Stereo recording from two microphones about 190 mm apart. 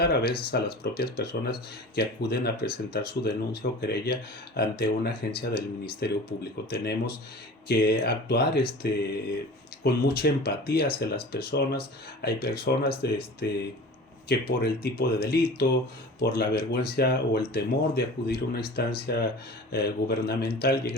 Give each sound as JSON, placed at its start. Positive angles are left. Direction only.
{"t": 0.0, "sound": "speech", "side_deg": 55}